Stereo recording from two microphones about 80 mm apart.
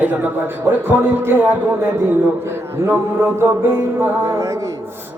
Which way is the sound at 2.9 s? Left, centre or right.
Right.